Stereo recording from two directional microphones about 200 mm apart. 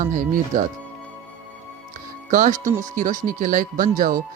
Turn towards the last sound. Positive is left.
turn(degrees=-45)  # may be behind; listen again after turning